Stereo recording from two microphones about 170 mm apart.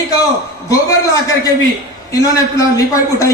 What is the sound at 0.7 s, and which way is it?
A man's voice, 20° left (ahead or behind).